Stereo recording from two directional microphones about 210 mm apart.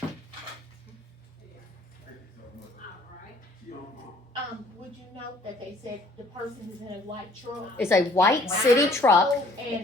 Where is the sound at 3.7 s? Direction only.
45° left (ahead or behind).